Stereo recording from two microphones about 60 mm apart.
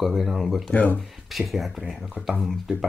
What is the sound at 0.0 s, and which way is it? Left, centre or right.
Speech, centre.